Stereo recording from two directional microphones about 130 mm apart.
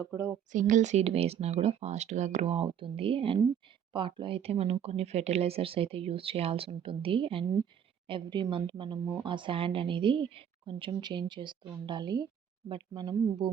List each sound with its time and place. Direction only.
0.1 s speech: 20° right (ahead or behind)
0.5 s a woman's voice: 70° right (ahead or behind); by 13.5 s 30° right (ahead or behind)